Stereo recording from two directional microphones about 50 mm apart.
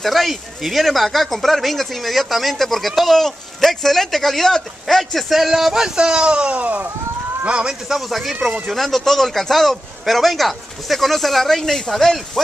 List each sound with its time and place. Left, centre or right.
0.0 s speech: centre; by 6.9 s right
7.4 s a man's voice: right
7.9 s speech: centre